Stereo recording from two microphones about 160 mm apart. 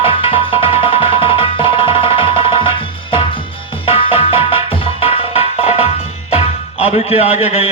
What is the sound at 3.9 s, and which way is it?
Music, 35° left (ahead or behind).